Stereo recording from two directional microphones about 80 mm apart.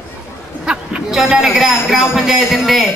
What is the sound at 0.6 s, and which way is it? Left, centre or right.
A man's voice, centre.